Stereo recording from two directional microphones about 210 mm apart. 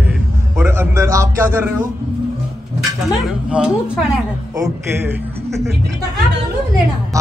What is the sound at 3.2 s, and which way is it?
Speech, 5° right (ahead or behind).